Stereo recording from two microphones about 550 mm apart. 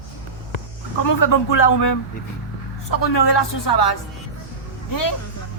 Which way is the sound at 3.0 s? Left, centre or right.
Left.